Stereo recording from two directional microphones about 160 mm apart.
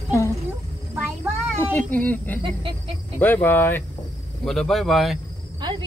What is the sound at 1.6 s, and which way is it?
Speech, 10° left (ahead or behind).